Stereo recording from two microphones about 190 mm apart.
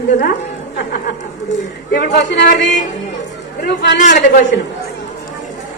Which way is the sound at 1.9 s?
55° left (ahead or behind).